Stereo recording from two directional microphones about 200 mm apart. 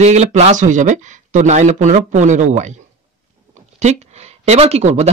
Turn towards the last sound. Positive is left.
turn(degrees=-35)  # may be behind; listen again after turning